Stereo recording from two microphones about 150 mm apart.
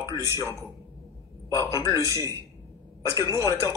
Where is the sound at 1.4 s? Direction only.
20° left (ahead or behind).